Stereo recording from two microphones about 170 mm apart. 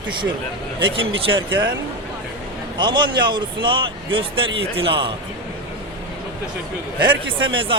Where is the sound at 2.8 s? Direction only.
25° right (ahead or behind).